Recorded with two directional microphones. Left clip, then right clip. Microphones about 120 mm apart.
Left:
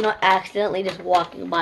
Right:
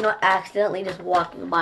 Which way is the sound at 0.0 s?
40° left (ahead or behind).